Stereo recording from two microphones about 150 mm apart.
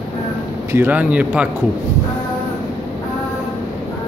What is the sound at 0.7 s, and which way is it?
Speech, 10° right (ahead or behind).